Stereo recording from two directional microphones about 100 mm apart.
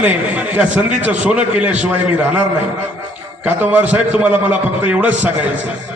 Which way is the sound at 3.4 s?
15° right (ahead or behind).